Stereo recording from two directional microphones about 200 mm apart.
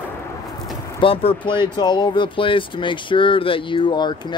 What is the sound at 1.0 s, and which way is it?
Speech, 30° left (ahead or behind).